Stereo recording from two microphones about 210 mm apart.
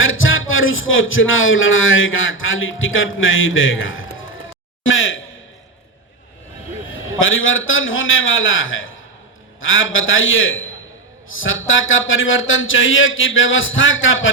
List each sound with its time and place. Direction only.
0.0 s music: 70° left (ahead or behind)
4.8 s a man's voice: 65° left (ahead or behind)
6.9 s a man's voice: 70° left (ahead or behind)